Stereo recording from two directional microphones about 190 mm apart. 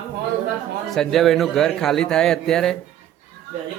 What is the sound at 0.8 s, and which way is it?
A man's voice, centre (ahead or behind).